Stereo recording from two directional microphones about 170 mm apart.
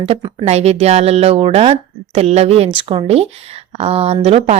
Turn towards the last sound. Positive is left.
turn(degrees=-35)  # may be behind; listen again after turning